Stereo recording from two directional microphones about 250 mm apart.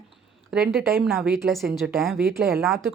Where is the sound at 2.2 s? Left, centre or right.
Right.